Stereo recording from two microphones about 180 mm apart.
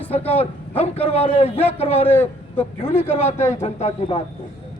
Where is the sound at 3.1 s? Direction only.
35° left (ahead or behind).